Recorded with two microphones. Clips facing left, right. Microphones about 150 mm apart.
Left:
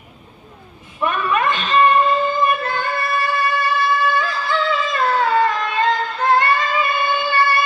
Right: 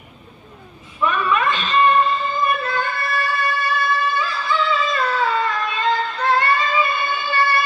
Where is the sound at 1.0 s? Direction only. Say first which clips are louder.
Even; 50° left (ahead or behind).